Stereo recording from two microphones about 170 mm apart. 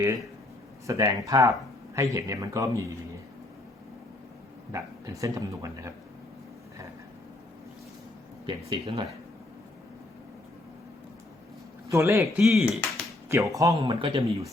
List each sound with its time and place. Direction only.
0.9 s speech: 20° right (ahead or behind)
4.7 s speech: 20° right (ahead or behind)
8.4 s speech: 30° right (ahead or behind)
11.9 s speech: 15° right (ahead or behind)
12.3 s speech: centre (ahead or behind)
13.2 s speech: 15° right (ahead or behind)
13.8 s speech: 30° right (ahead or behind)